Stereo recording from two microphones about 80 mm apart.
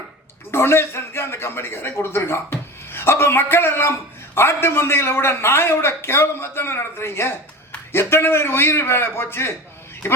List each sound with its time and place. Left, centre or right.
0.5 s a man's voice: left